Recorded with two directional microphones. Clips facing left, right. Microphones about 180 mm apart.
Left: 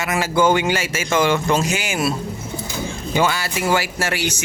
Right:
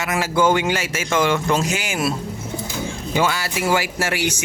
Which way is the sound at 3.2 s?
Centre (ahead or behind).